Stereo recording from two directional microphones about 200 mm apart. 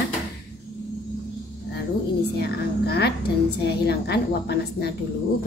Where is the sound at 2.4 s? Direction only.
55° left (ahead or behind).